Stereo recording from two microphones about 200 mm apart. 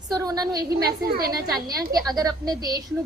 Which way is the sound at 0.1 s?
20° right (ahead or behind).